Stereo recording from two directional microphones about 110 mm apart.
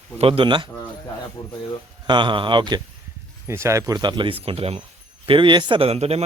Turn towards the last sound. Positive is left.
turn(degrees=-70)  # may be behind; listen again after turning